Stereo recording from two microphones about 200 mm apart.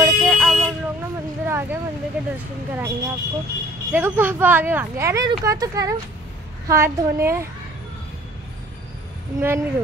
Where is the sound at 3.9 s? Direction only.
10° right (ahead or behind).